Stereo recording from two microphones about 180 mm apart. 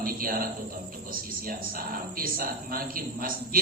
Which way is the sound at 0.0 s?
55° right (ahead or behind).